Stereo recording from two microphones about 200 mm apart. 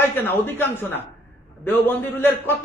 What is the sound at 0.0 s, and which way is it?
Speech, 10° left (ahead or behind).